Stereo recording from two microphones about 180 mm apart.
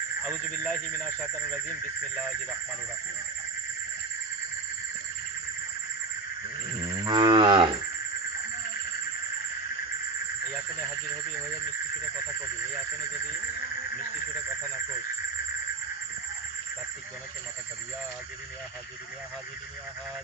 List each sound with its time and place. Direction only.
0.3 s speech: 5° left (ahead or behind)
7.0 s moo: 25° right (ahead or behind)